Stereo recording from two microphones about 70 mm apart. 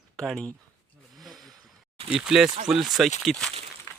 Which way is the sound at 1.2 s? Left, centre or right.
Centre.